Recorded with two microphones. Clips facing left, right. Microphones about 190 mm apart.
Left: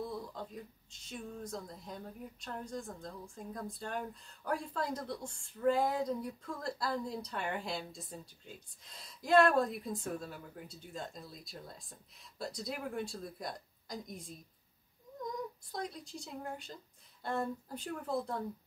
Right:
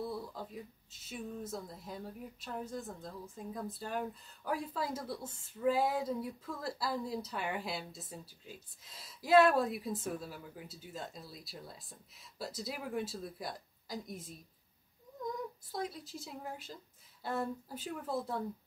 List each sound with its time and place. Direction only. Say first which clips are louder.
0.0 s speech: right 1 dB; 5° right (ahead or behind)
15.7 s speech: right 4 dB; centre (ahead or behind)